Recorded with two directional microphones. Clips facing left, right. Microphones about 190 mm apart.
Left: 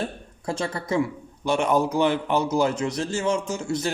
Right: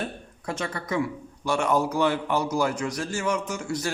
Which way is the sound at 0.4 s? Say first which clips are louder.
Left 3 dB; 30° left (ahead or behind).